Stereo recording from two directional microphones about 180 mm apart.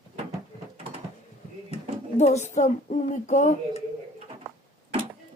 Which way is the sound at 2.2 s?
40° left (ahead or behind).